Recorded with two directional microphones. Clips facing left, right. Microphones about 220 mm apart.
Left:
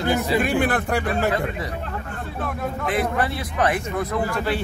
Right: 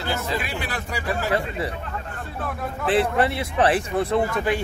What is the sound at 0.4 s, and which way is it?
Speech, 50° left (ahead or behind).